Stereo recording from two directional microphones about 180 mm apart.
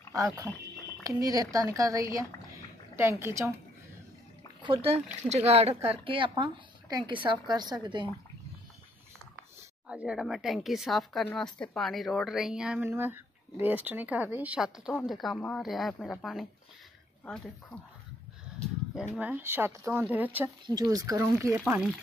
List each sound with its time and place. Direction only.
0.1 s a woman's voice: 20° right (ahead or behind)
2.1 s a sound: 15° right (ahead or behind)
4.6 s a woman's voice: 30° right (ahead or behind)
9.8 s a woman's voice: 5° right (ahead or behind)
19.1 s speech: 10° right (ahead or behind)
20.6 s a woman's voice: 20° right (ahead or behind)
21.5 s a woman's voice: 5° right (ahead or behind)